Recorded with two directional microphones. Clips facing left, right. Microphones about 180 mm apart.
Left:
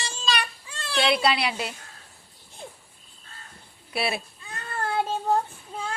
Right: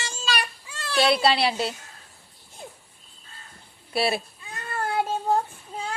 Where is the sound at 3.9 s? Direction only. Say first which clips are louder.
Right 4 dB; 35° right (ahead or behind).